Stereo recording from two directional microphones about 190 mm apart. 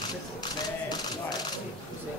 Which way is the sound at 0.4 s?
20° left (ahead or behind).